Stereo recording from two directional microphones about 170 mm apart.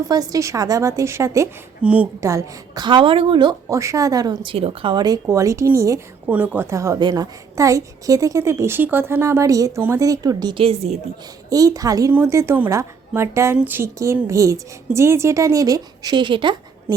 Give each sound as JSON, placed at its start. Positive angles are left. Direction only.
{"t": 0.1, "sound": "a woman's voice", "side_deg": -20}
{"t": 4.5, "sound": "a woman's voice", "side_deg": -35}
{"t": 11.4, "sound": "a woman's voice", "side_deg": -20}